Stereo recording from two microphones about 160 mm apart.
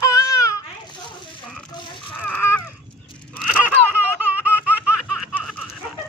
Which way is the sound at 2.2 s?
10° left (ahead or behind).